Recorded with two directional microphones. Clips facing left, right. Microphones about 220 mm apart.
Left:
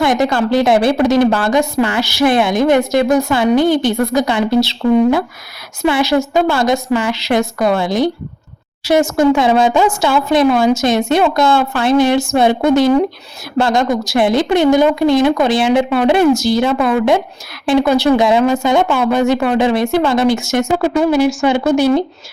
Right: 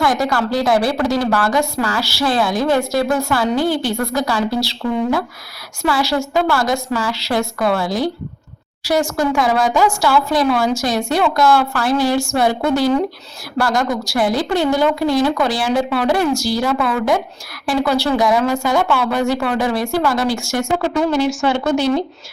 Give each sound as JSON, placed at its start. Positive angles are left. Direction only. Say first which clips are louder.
{"t": 0.0, "sound": "a woman's voice", "louder": "left 4 dB", "side_deg": 20}
{"t": 20.7, "sound": "speech", "louder": "left 3 dB", "side_deg": 10}